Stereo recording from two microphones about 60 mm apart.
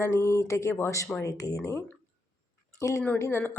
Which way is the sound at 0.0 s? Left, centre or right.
Left.